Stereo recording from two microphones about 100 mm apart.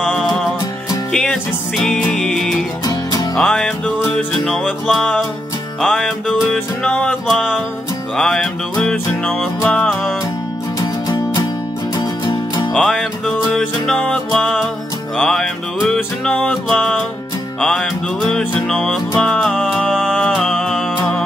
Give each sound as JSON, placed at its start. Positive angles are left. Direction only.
{"t": 0.1, "sound": "music", "side_deg": 0}
{"t": 2.8, "sound": "music", "side_deg": 40}
{"t": 3.3, "sound": "music", "side_deg": 5}
{"t": 4.8, "sound": "music", "side_deg": 0}
{"t": 12.0, "sound": "music", "side_deg": 40}
{"t": 12.7, "sound": "music", "side_deg": 0}
{"t": 19.5, "sound": "music", "side_deg": 0}